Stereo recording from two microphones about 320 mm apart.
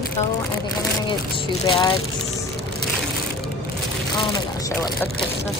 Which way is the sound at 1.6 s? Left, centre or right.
Centre.